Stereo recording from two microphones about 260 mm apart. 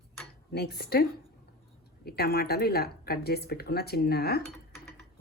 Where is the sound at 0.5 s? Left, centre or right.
Left.